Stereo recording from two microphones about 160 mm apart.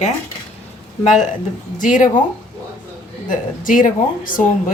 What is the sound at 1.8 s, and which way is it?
Speech, 55° left (ahead or behind).